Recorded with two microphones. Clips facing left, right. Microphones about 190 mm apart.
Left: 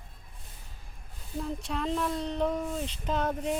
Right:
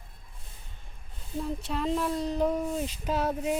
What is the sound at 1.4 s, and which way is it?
Speech, centre (ahead or behind).